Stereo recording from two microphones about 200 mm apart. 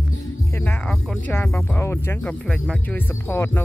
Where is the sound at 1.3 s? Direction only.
10° left (ahead or behind).